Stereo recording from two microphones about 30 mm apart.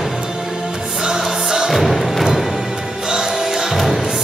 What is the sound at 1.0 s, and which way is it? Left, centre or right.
Music, centre.